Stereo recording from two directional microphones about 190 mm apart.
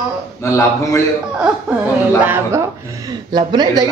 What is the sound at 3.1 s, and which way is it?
Speech, 25° right (ahead or behind).